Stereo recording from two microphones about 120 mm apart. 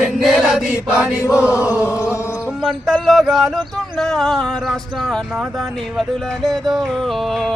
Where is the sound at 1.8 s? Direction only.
25° left (ahead or behind).